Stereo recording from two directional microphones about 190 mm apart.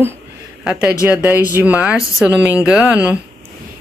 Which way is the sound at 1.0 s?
10° right (ahead or behind).